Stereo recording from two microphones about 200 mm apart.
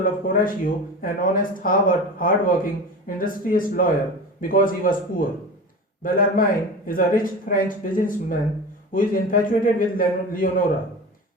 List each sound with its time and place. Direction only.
0.0 s speech: 45° left (ahead or behind)